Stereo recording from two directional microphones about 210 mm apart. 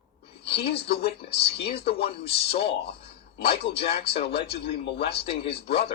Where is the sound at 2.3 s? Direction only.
50° left (ahead or behind).